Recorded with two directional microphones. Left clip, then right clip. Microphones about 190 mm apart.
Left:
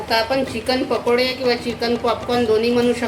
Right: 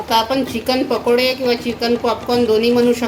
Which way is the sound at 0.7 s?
30° right (ahead or behind).